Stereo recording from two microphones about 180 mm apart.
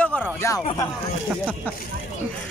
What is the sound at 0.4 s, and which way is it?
Speech, 15° left (ahead or behind).